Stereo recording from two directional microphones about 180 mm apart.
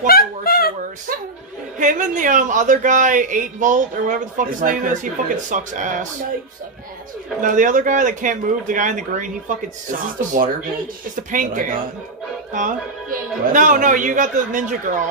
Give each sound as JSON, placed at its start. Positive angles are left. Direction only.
{"t": 0.0, "sound": "a sound", "side_deg": 55}
{"t": 1.8, "sound": "a man's voice", "side_deg": -45}
{"t": 7.4, "sound": "a man's voice", "side_deg": -45}